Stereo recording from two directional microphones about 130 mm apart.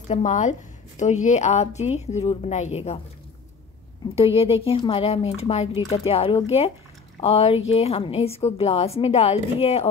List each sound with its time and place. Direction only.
0.1 s a woman's voice: 65° left (ahead or behind)
4.4 s a woman's voice: 50° left (ahead or behind)